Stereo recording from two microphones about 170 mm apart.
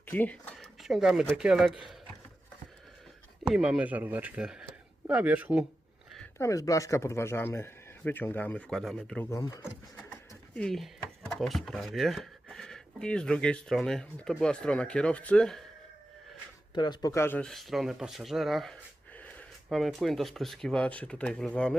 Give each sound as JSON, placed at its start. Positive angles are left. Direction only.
{"t": 0.1, "sound": "speech", "side_deg": 10}
{"t": 3.4, "sound": "speech", "side_deg": -5}
{"t": 6.4, "sound": "speech", "side_deg": 20}
{"t": 9.3, "sound": "speech", "side_deg": 20}
{"t": 10.6, "sound": "speech", "side_deg": 5}
{"t": 16.7, "sound": "speech", "side_deg": 25}